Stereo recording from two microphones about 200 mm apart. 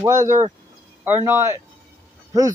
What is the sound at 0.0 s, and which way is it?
Speech, 15° right (ahead or behind).